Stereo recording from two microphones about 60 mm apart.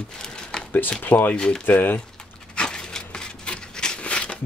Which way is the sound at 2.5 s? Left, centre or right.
Centre.